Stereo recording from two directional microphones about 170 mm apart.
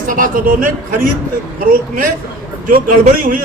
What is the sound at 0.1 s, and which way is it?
Speech, 55° right (ahead or behind).